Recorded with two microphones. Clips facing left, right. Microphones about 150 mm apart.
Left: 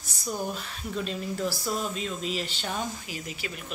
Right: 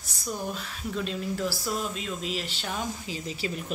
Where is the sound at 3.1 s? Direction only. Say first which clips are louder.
Right 4 dB; 30° right (ahead or behind).